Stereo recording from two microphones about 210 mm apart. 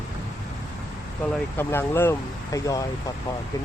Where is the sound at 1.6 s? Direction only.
10° left (ahead or behind).